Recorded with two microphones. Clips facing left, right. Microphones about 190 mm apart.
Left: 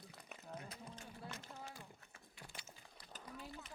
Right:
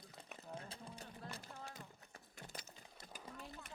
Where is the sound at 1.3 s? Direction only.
10° right (ahead or behind).